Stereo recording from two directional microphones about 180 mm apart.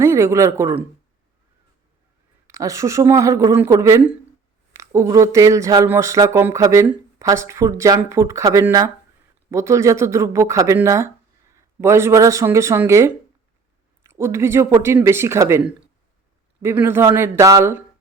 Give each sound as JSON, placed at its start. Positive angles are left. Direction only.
{"t": 0.0, "sound": "speech", "side_deg": -15}
{"t": 2.5, "sound": "speech", "side_deg": -15}